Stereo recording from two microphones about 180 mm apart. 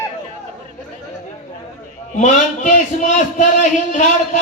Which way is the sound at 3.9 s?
45° left (ahead or behind).